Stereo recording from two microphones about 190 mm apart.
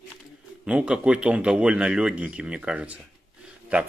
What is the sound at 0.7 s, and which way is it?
Speech, 5° right (ahead or behind).